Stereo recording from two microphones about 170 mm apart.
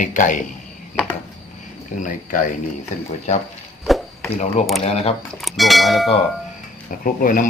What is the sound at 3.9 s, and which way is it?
Chop, centre (ahead or behind).